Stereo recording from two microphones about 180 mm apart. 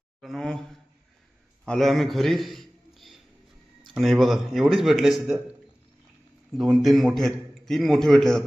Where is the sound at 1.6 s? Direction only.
5° left (ahead or behind).